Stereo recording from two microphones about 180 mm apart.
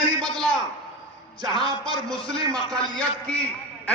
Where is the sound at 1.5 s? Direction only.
30° left (ahead or behind).